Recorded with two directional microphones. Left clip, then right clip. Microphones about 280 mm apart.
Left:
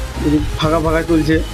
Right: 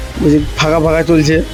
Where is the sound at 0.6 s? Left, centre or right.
Right.